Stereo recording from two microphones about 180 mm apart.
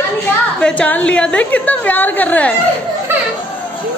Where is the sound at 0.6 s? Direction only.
5° left (ahead or behind).